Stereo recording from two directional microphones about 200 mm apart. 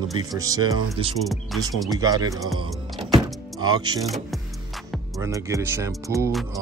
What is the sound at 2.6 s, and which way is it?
Power windows, 25° right (ahead or behind).